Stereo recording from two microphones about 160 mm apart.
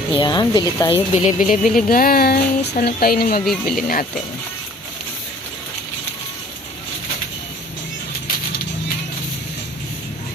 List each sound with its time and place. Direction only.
0.2 s speech: 25° left (ahead or behind)
1.1 s speech: 50° left (ahead or behind); by 3.4 s 70° left (ahead or behind)
3.4 s speech: centre (ahead or behind)